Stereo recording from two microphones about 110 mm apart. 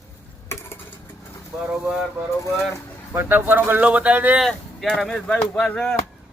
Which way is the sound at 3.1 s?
20° right (ahead or behind).